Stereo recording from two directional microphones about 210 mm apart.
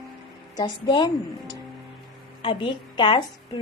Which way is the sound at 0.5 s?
20° left (ahead or behind).